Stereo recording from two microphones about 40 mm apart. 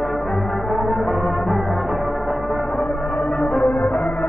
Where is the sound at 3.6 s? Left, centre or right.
Left.